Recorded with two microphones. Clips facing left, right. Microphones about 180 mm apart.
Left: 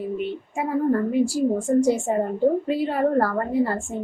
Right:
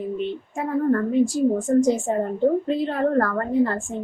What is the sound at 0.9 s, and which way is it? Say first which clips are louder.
A woman's voice: right 2 dB; 10° left (ahead or behind).